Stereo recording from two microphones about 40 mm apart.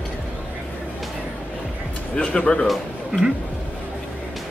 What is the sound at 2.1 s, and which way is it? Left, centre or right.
Speech, left.